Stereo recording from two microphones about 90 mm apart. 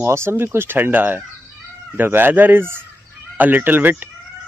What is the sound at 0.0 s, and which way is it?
Speech, 30° right (ahead or behind).